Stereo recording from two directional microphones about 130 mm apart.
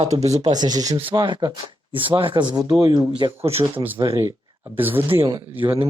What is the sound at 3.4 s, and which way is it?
Speech, 50° right (ahead or behind).